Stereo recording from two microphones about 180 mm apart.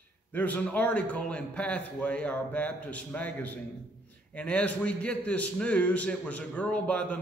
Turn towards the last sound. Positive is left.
turn(degrees=5)  # may be behind; listen again after turning